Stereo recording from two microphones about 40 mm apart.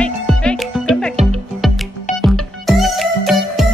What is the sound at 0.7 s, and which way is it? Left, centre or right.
Music, centre.